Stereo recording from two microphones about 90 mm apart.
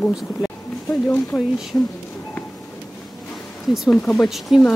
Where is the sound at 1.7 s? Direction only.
25° left (ahead or behind).